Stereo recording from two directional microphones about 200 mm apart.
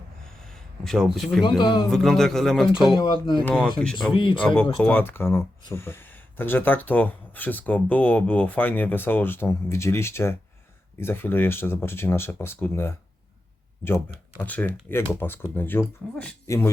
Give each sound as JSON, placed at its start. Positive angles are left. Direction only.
{"t": 0.4, "sound": "a sound", "side_deg": 0}
{"t": 1.4, "sound": "speech", "side_deg": 20}
{"t": 1.9, "sound": "speech", "side_deg": 0}
{"t": 2.9, "sound": "speech", "side_deg": 25}
{"t": 3.4, "sound": "speech", "side_deg": 5}
{"t": 4.1, "sound": "speech", "side_deg": 25}
{"t": 4.4, "sound": "speech", "side_deg": 5}
{"t": 14.3, "sound": "speech", "side_deg": 10}